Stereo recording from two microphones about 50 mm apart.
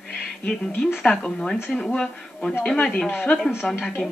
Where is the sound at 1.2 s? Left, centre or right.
Centre.